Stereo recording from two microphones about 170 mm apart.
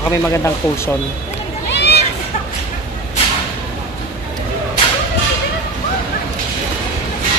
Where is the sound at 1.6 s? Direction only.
85° left.